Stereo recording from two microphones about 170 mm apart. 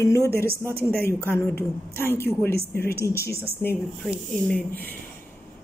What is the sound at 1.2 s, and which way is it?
A woman's voice, 15° left (ahead or behind).